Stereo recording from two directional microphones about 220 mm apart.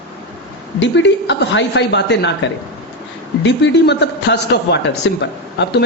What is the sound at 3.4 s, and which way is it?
Speech, 55° left (ahead or behind).